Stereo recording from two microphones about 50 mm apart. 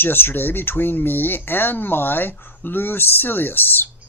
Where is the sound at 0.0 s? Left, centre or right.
Left.